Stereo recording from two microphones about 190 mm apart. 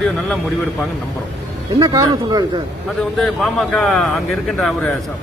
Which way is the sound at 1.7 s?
20° right (ahead or behind).